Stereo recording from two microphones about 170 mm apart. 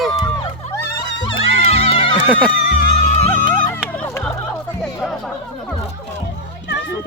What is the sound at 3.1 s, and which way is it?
Music, 40° left (ahead or behind).